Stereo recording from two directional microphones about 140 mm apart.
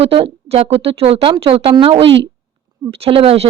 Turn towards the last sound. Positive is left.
turn(degrees=-40)  # may be behind; listen again after turning